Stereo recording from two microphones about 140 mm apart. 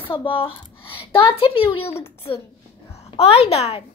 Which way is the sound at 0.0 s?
40° left (ahead or behind).